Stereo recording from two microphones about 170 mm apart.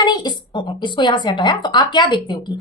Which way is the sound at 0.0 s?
25° left (ahead or behind).